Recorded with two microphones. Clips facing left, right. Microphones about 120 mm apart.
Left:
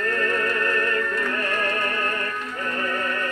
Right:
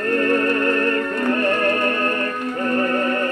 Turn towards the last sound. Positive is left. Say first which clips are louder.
# right 7 dB
turn(degrees=-35)  # may be behind; listen again after turning